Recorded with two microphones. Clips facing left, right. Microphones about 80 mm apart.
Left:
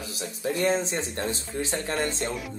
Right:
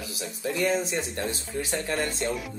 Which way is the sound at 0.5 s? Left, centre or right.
Left.